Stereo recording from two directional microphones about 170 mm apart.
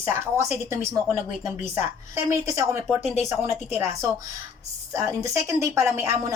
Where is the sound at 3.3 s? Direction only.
15° right (ahead or behind).